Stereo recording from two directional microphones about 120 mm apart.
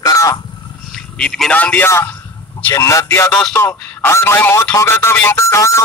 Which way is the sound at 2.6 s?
25° left (ahead or behind).